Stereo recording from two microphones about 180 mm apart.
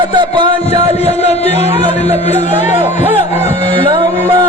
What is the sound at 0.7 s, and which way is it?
Speech, 35° left (ahead or behind).